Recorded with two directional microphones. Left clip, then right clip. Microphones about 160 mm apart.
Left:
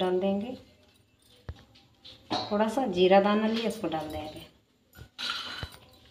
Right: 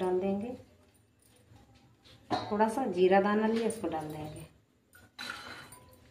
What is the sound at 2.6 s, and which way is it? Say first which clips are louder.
Speech: left 2 dB; 15° left (ahead or behind).